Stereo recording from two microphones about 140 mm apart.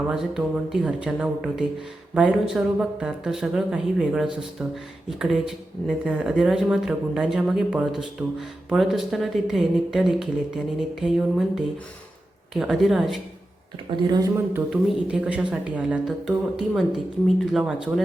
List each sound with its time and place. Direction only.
0.1 s speech: 5° right (ahead or behind)
13.9 s speech: 30° right (ahead or behind)
14.7 s speech: 5° right (ahead or behind)